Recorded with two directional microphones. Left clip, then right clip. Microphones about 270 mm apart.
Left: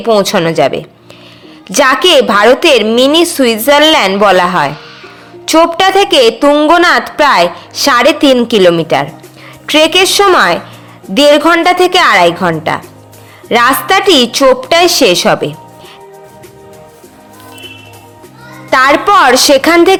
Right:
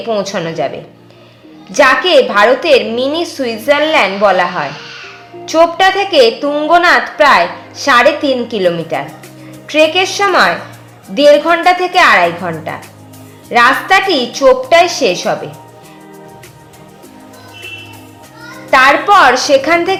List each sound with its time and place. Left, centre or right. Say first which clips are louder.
0.0 s a woman's voice: left 7 dB; left
18.7 s a woman's voice: left 1 dB; left